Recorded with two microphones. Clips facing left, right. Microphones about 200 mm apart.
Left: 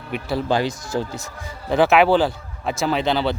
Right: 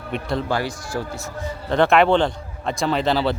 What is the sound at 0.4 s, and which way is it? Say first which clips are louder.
Speech: left 3 dB; 20° left (ahead or behind).